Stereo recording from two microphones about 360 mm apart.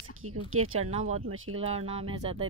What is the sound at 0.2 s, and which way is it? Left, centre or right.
Speech, right.